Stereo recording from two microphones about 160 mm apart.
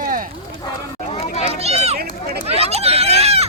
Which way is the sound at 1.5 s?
40° right (ahead or behind).